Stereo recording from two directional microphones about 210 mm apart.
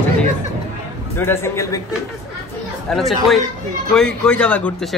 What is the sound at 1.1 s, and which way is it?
Speech, 10° left (ahead or behind).